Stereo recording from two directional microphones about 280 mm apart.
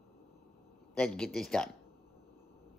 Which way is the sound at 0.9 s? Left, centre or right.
Centre.